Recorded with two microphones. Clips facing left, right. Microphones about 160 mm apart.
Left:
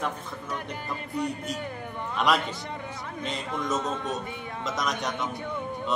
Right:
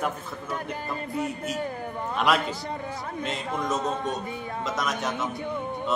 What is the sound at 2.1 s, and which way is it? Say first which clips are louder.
Speech: right 1 dB; centre (ahead or behind).